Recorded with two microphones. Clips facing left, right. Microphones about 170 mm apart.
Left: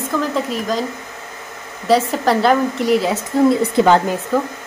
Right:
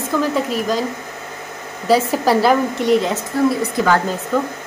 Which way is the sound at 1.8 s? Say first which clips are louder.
Even; 5° right (ahead or behind).